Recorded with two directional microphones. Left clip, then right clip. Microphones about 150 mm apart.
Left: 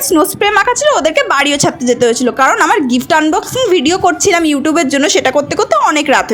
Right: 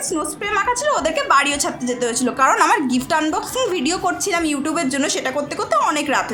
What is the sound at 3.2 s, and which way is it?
Speech, 25° left (ahead or behind).